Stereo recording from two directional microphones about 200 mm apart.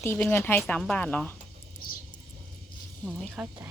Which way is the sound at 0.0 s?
10° left (ahead or behind).